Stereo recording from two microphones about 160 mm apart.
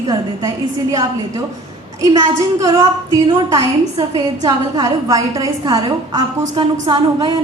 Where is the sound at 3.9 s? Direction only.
35° right (ahead or behind).